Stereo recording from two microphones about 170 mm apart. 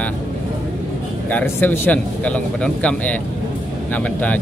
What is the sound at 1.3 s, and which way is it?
Speech, 10° left (ahead or behind).